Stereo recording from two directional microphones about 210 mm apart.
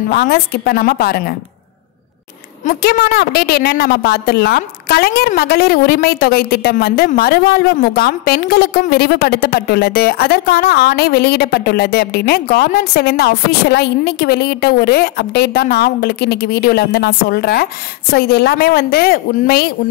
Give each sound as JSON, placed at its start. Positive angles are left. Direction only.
{"t": 0.1, "sound": "a woman's voice", "side_deg": 45}
{"t": 2.6, "sound": "a woman's voice", "side_deg": 45}